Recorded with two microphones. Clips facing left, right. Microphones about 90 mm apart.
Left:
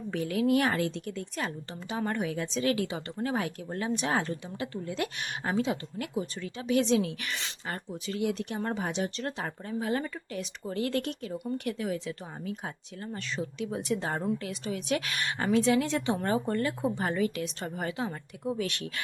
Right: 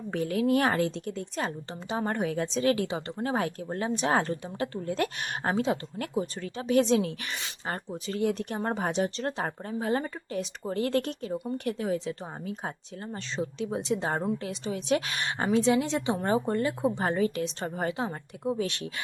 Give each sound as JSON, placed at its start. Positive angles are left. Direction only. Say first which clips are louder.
{"t": 0.1, "sound": "a woman's voice", "louder": "right 1 dB", "side_deg": -35}